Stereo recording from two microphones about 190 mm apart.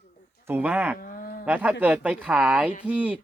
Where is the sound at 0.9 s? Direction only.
50° left (ahead or behind).